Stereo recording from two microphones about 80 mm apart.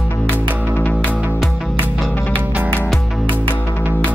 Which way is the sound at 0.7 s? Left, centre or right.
Left.